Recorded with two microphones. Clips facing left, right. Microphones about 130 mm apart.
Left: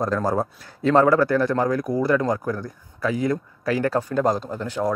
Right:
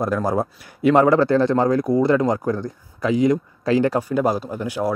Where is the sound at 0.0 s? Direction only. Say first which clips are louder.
Right 1 dB; 10° right (ahead or behind).